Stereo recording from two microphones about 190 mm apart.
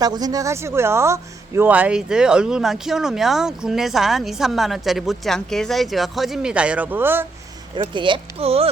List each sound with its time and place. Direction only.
0.0 s speech: 20° right (ahead or behind)
7.8 s speech: 25° right (ahead or behind)